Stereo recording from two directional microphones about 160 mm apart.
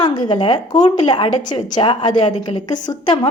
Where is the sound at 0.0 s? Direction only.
25° left (ahead or behind).